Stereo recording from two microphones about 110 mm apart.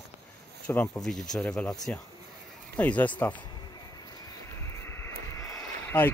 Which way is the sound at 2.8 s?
15° left (ahead or behind).